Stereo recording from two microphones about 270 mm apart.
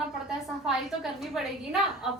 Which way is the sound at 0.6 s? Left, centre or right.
Centre.